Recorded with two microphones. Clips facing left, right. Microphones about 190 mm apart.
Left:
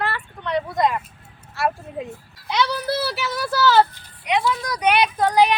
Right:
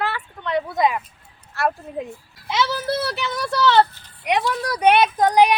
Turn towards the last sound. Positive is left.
turn(degrees=-15)  # may be behind; listen again after turning